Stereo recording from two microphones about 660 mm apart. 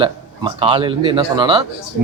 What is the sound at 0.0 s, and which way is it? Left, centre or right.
Speech, centre.